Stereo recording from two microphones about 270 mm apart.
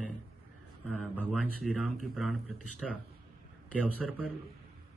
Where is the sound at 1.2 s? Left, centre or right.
Centre.